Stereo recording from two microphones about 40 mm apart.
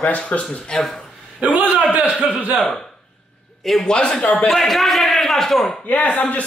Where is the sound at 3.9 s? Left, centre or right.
Left.